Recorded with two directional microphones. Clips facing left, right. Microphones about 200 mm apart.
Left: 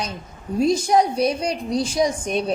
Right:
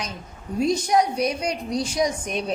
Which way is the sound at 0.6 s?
30° left (ahead or behind).